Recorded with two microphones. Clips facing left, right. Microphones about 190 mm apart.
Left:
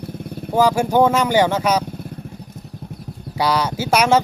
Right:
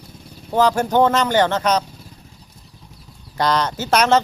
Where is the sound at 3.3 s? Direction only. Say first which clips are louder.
Even; 10° left (ahead or behind).